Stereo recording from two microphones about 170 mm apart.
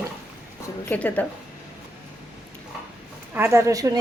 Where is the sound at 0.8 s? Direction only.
10° left (ahead or behind).